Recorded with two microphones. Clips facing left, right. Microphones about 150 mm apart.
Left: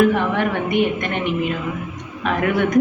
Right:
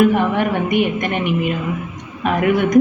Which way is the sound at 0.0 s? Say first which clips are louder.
Right 2 dB; 15° right (ahead or behind).